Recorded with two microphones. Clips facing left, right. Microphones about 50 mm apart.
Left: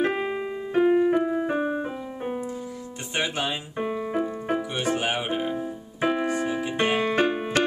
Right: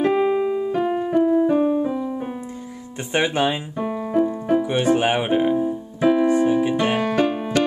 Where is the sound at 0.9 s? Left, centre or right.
Centre.